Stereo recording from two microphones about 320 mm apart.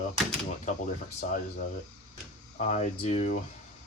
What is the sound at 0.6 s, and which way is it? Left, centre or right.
Speech, left.